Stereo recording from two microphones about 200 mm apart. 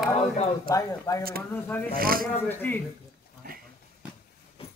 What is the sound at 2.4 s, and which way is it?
Speech, 10° left (ahead or behind).